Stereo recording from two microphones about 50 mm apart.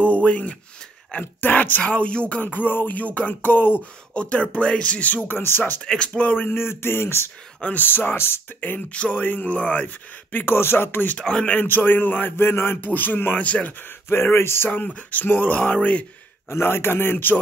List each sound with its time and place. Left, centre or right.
0.0 s speech: left
4.1 s speech: left
5.3 s a man's voice: left
5.9 s speech: left
6.2 s speech: left
6.5 s a man's voice: left
7.8 s a man's voice: left
8.9 s speech: left
9.2 s speech: left
10.4 s a man's voice: left
12.8 s speech: left
14.0 s a man's voice: left
14.7 s speech: left
16.4 s a man's voice: left